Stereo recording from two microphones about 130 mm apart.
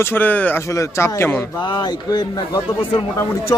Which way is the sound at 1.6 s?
35° left (ahead or behind).